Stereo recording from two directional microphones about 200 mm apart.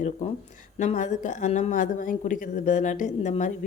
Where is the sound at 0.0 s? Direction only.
35° left (ahead or behind).